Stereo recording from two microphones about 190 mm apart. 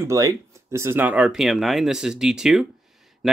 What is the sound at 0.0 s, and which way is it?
Speech, 15° right (ahead or behind).